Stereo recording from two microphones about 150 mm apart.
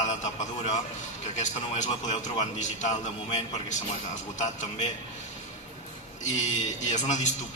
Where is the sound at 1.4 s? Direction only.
55° left (ahead or behind).